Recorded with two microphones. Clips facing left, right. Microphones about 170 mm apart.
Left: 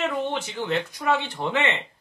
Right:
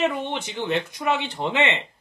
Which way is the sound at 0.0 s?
20° right (ahead or behind).